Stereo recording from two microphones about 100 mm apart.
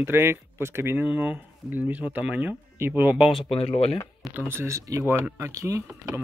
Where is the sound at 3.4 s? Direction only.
75° left (ahead or behind).